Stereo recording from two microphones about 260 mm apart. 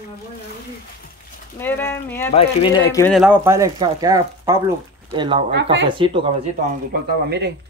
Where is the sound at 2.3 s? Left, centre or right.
Centre.